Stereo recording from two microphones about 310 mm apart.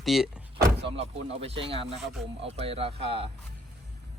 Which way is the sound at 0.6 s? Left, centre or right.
Centre.